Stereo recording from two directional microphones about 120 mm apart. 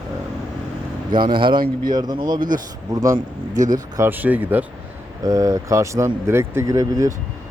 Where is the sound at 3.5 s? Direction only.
90° right.